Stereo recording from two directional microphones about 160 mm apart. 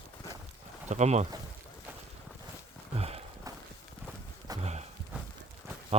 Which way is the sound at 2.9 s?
40° right (ahead or behind).